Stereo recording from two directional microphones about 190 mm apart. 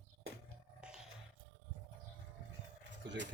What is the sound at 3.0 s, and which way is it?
Keys jangling, 70° right (ahead or behind).